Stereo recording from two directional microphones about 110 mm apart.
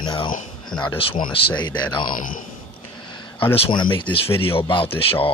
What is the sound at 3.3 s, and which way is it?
Speech, 55° left (ahead or behind).